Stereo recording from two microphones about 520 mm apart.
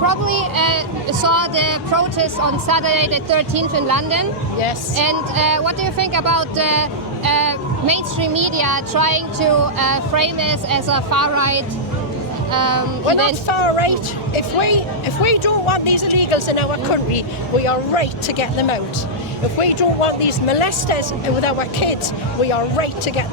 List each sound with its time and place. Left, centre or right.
0.3 s speech: right
13.5 s speech: left
19.5 s speech: left